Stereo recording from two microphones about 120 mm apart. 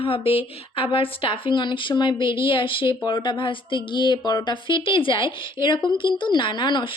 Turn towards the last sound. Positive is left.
turn(degrees=40)  # may be behind; listen again after turning